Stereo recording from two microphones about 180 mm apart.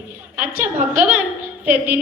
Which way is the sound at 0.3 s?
10° right (ahead or behind).